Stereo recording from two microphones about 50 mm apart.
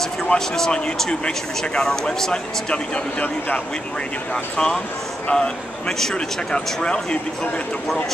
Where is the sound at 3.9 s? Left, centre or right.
Centre.